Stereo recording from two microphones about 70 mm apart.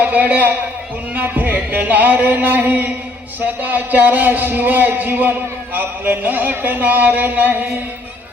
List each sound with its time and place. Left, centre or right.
0.0 s a man's voice: right